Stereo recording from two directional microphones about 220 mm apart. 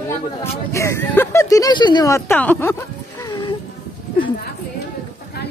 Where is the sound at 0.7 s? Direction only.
15° left (ahead or behind).